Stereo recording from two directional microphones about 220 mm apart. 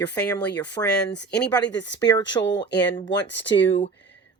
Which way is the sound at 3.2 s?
55° left (ahead or behind).